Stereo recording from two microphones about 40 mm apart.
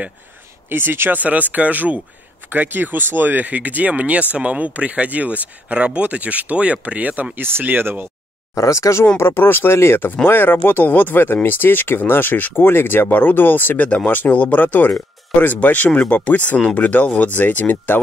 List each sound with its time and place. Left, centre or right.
0.7 s speech: right
1.1 s speech: right
2.5 s speech: right
7.3 s speech: right
7.6 s speech: right
9.0 s speech: left
10.2 s speech: left
10.9 s speech: left
13.1 s speech: left